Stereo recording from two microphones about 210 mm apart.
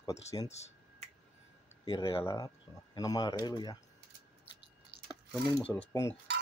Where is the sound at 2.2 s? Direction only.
15° left (ahead or behind).